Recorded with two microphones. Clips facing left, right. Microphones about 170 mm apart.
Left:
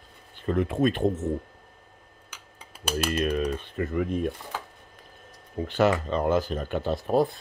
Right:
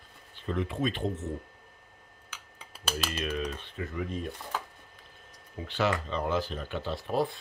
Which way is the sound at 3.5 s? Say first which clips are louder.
Left 8 dB; 60° left (ahead or behind).